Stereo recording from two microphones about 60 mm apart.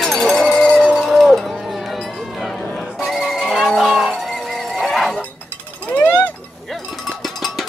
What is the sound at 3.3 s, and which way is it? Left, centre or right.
Music, centre.